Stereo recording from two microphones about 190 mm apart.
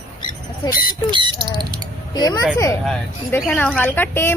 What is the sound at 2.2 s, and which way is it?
Speech, 20° left (ahead or behind).